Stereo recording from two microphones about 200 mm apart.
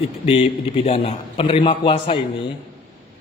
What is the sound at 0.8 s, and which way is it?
A man's voice, 30° left (ahead or behind).